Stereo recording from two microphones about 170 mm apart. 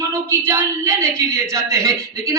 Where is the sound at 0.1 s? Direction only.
15° right (ahead or behind).